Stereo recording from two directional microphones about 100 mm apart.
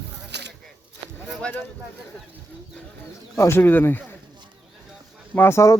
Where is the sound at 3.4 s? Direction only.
25° left (ahead or behind).